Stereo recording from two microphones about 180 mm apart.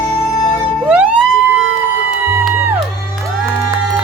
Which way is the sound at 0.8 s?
5° right (ahead or behind).